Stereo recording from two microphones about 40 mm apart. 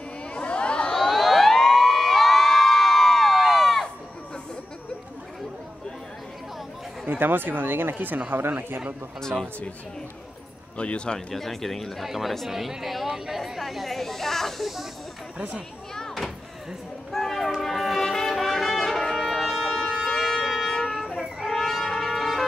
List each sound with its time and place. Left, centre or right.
0.3 s a sound: left
1.0 s a sound: centre
1.6 s crowd: centre
7.1 s speech: right
7.9 s speech: right
10.8 s speech: left
11.1 s speech: centre
17.1 s music: centre
20.1 s wind instrument: centre
21.5 s brass instrument: centre